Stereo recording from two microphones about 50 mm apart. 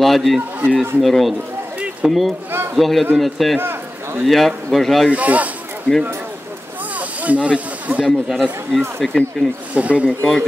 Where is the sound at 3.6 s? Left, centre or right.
Right.